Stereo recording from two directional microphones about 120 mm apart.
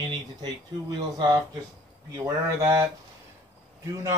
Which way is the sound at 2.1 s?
25° right (ahead or behind).